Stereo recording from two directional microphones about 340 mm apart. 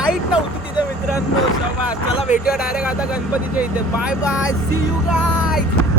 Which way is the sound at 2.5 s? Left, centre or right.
Centre.